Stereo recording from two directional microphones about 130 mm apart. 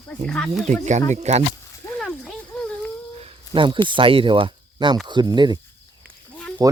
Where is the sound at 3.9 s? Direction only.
45° right (ahead or behind).